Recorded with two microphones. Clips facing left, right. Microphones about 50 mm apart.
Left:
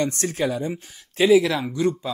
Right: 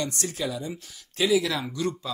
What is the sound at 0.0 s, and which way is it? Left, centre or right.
Speech, left.